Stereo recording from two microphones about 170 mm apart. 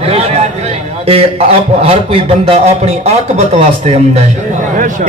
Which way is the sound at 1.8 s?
35° right (ahead or behind).